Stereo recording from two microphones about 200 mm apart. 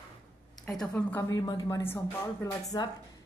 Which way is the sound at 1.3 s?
20° left (ahead or behind).